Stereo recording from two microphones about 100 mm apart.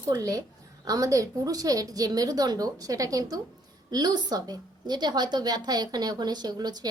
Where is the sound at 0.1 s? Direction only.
35° right (ahead or behind).